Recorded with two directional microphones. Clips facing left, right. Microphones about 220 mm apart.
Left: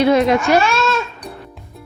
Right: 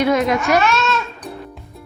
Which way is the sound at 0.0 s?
30° left (ahead or behind).